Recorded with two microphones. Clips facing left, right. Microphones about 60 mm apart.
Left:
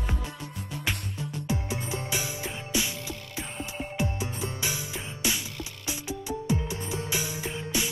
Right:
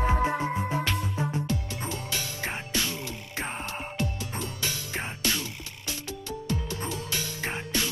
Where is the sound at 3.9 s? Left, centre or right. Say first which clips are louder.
Left 4 dB; centre.